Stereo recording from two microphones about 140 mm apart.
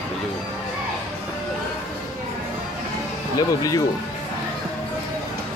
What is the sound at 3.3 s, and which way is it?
Speech, 25° left (ahead or behind).